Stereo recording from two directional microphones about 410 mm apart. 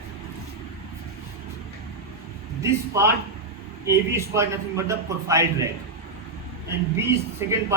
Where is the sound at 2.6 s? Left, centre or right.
Centre.